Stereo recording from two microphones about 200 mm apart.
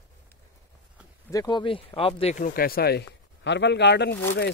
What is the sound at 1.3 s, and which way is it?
Speech, 20° left (ahead or behind).